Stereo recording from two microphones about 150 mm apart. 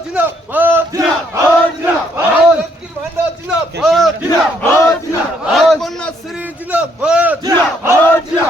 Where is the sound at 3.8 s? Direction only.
5° right (ahead or behind).